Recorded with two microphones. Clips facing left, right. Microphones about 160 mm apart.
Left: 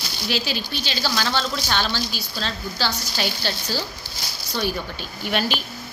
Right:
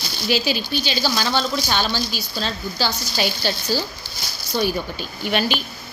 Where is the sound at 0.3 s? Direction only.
5° right (ahead or behind).